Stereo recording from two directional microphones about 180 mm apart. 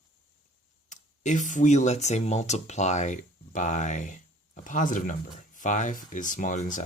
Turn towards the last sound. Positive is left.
turn(degrees=45)  # may be behind; listen again after turning